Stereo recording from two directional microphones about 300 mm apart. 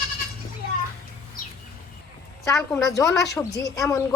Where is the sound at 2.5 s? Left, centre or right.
Centre.